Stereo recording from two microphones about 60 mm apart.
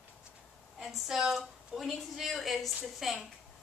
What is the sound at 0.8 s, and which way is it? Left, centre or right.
A woman's voice, centre.